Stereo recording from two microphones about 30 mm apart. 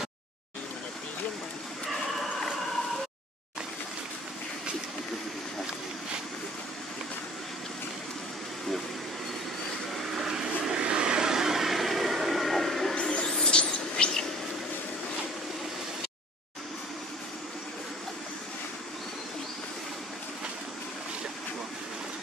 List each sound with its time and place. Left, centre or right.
10.1 s vehicle: centre
10.7 s vehicle: right; by 12.9 s centre
13.3 s vehicle: left
13.6 s a sound: left